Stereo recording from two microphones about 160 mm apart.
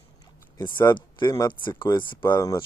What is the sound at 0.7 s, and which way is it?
Speech, 25° left (ahead or behind).